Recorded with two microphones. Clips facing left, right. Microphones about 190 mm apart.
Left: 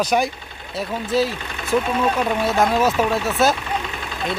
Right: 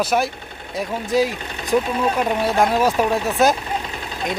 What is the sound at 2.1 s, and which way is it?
Speech, 10° right (ahead or behind).